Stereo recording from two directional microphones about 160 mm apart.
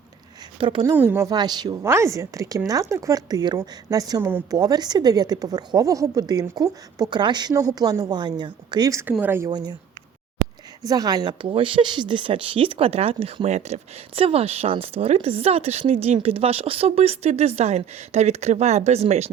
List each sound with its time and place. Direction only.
0.6 s a woman's voice: 30° right (ahead or behind)
0.9 s a woman's voice: 15° right (ahead or behind)
1.3 s a woman's voice: 25° right (ahead or behind)
4.5 s a woman's voice: 25° right (ahead or behind)
9.5 s a woman's voice: 25° right (ahead or behind)
10.8 s speech: 25° right (ahead or behind); by 19.3 s 40° right (ahead or behind)